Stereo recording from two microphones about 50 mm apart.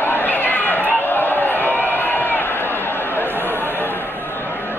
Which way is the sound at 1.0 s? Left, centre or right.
Left.